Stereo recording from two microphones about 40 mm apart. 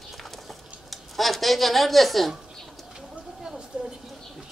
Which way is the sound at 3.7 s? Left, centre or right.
Right.